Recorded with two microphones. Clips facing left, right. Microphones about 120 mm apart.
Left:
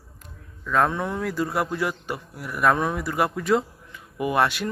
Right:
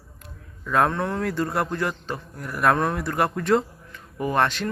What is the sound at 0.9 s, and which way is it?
A man's voice, 10° left (ahead or behind).